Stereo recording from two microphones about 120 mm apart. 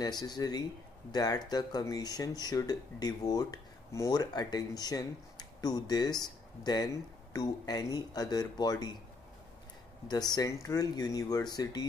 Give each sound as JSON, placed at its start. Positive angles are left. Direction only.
{"t": 0.0, "sound": "speech", "side_deg": 35}
{"t": 10.0, "sound": "speech", "side_deg": 35}